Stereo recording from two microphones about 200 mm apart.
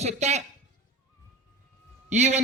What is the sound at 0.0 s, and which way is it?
Speech, 35° right (ahead or behind).